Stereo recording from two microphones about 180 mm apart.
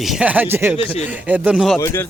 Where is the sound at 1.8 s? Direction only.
15° left (ahead or behind).